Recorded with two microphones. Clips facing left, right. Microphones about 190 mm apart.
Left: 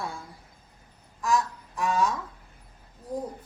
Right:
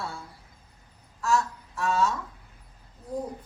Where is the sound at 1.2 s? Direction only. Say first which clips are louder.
Even; 15° left (ahead or behind).